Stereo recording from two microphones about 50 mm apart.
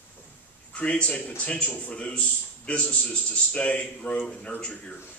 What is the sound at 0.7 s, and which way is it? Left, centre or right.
A man's voice, left.